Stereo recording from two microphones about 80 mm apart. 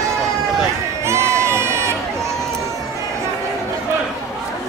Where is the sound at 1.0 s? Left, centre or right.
Right.